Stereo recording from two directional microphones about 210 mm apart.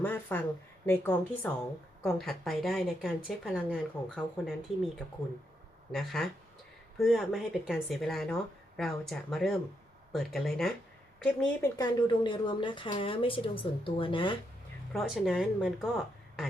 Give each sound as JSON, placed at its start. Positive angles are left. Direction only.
{"t": 0.0, "sound": "a sound", "side_deg": 10}
{"t": 0.9, "sound": "a woman's voice", "side_deg": 5}
{"t": 5.9, "sound": "speech", "side_deg": 0}
{"t": 11.8, "sound": "a woman's voice", "side_deg": 20}
{"t": 14.9, "sound": "speech", "side_deg": 0}